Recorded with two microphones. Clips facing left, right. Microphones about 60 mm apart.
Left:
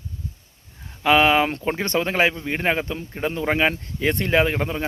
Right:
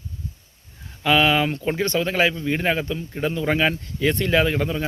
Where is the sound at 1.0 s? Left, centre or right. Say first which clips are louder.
Left 2 dB; left.